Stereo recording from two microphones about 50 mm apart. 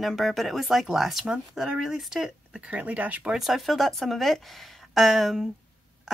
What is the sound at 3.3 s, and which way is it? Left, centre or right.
A woman's voice, centre.